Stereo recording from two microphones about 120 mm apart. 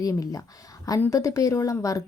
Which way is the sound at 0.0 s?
30° left (ahead or behind).